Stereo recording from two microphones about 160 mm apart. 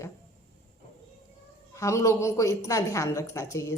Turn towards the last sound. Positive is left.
turn(degrees=20)  # may be behind; listen again after turning